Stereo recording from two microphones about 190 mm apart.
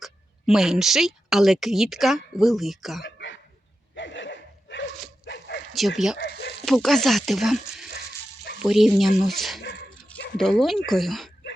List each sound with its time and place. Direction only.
0.0 s speech: centre (ahead or behind)
3.2 s hiccup: 75° left (ahead or behind)
3.9 s a sound: 75° left (ahead or behind)
5.2 s dog: 65° left (ahead or behind)
6.1 s speech: 65° left (ahead or behind)
6.7 s speech: centre (ahead or behind)